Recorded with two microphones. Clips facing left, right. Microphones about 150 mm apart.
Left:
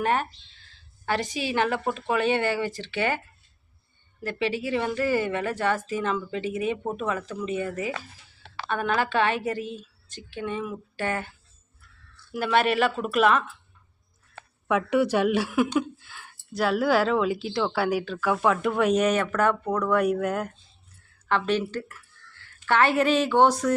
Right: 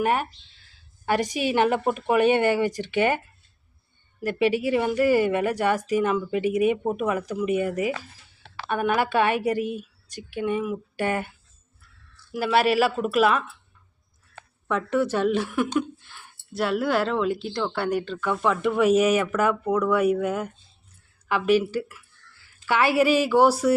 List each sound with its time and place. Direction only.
0.0 s a woman's voice: 10° right (ahead or behind)
4.2 s a woman's voice: 15° right (ahead or behind)
12.3 s a woman's voice: 5° right (ahead or behind)
14.7 s a woman's voice: 10° left (ahead or behind); by 23.7 s 10° right (ahead or behind)